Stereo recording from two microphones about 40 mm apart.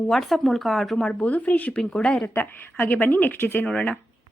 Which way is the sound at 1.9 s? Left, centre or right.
Left.